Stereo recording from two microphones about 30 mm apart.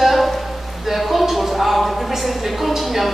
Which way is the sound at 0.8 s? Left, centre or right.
Centre.